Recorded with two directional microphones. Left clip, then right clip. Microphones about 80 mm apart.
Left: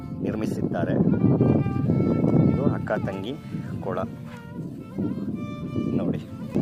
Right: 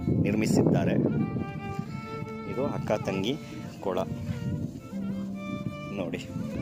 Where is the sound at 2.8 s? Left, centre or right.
Right.